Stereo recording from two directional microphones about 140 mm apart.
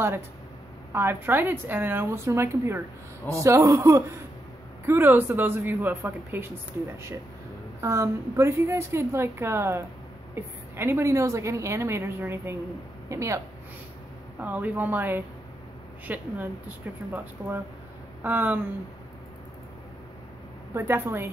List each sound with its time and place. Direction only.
0.9 s a woman's voice: 15° right (ahead or behind)
14.4 s a woman's voice: 10° right (ahead or behind)
20.7 s a woman's voice: 15° right (ahead or behind)